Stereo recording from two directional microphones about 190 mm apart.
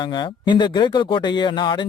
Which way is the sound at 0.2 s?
25° left (ahead or behind).